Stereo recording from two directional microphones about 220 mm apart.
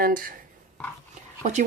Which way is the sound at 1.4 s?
35° right (ahead or behind).